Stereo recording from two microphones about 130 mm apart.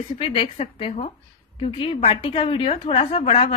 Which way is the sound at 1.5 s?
40° left (ahead or behind).